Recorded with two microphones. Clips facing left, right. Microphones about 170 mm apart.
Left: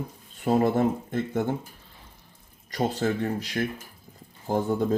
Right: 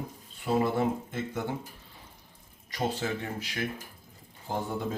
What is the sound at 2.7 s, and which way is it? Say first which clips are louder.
Speech: left 5 dB; 45° left (ahead or behind).